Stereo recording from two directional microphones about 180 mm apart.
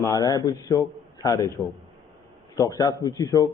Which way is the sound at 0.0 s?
20° left (ahead or behind).